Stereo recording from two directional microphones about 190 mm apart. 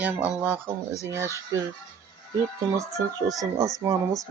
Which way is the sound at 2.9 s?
15° right (ahead or behind).